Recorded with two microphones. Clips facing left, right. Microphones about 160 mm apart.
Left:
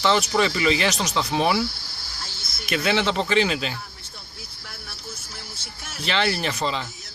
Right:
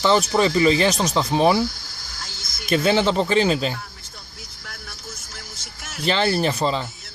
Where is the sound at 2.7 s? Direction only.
40° right (ahead or behind).